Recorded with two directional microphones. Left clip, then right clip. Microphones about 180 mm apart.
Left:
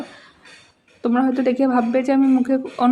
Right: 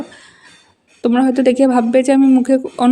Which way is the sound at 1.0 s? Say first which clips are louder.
Right 6 dB; 30° right (ahead or behind).